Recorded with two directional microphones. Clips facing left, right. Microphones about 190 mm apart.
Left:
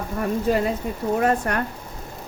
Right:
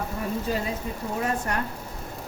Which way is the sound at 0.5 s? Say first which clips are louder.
Left 7 dB; 60° left (ahead or behind).